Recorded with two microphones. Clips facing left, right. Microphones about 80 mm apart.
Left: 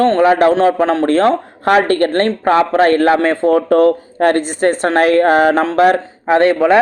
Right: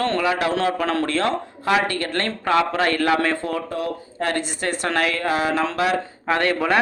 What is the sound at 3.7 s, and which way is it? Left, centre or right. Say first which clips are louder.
A woman's voice: left 16 dB; left.